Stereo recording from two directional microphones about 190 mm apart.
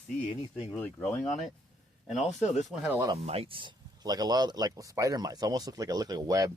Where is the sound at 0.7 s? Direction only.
10° left (ahead or behind).